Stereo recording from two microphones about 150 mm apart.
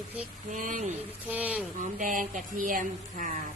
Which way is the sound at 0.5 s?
60° right (ahead or behind).